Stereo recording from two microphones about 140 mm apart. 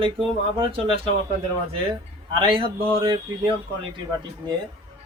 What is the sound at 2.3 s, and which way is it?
Speech, 40° right (ahead or behind).